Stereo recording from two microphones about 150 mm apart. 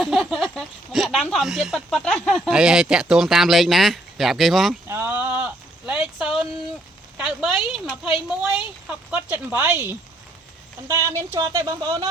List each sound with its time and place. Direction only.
0.0 s speech: centre (ahead or behind)
4.9 s a sound: 15° right (ahead or behind)
7.2 s a woman's voice: 5° right (ahead or behind); by 12.0 s 25° right (ahead or behind)